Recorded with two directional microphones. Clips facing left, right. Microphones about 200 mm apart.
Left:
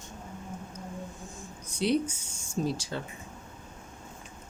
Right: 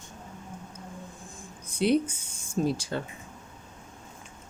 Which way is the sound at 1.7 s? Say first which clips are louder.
Right 3 dB; 55° right (ahead or behind).